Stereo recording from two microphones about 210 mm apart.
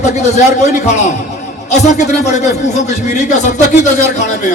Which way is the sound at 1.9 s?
35° left (ahead or behind).